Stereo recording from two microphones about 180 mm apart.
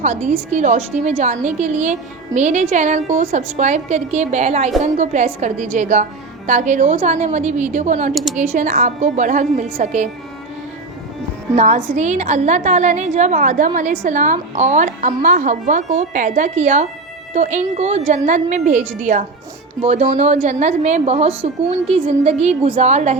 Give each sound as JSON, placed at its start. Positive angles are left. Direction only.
{"t": 0.0, "sound": "a woman's voice", "side_deg": -40}
{"t": 8.1, "sound": "speech", "side_deg": 0}
{"t": 8.4, "sound": "a woman's voice", "side_deg": -45}
{"t": 11.5, "sound": "a woman's voice", "side_deg": -40}